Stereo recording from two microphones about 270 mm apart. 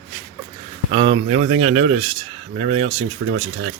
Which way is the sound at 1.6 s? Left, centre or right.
Right.